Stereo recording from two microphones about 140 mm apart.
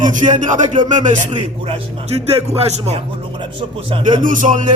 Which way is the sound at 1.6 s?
50° right (ahead or behind).